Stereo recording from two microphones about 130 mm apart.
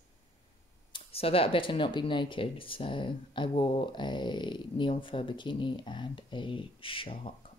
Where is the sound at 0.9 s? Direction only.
45° left (ahead or behind).